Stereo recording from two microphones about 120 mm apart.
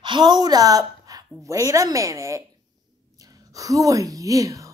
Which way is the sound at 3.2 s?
30° right (ahead or behind).